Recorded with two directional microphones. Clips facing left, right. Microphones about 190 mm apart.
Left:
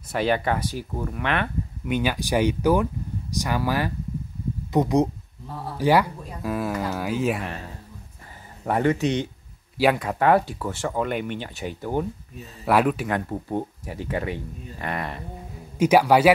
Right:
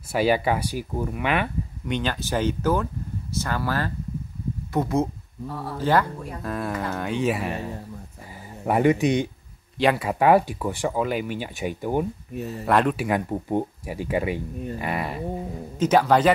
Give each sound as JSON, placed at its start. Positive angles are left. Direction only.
{"t": 0.1, "sound": "speech", "side_deg": -5}
{"t": 1.9, "sound": "speech", "side_deg": 10}
{"t": 9.8, "sound": "speech", "side_deg": 5}
{"t": 10.0, "sound": "speech", "side_deg": -10}
{"t": 11.0, "sound": "speech", "side_deg": -5}
{"t": 12.6, "sound": "speech", "side_deg": 5}
{"t": 12.9, "sound": "speech", "side_deg": -10}
{"t": 15.8, "sound": "speech", "side_deg": 10}